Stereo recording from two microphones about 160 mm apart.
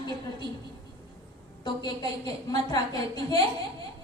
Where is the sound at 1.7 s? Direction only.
25° left (ahead or behind).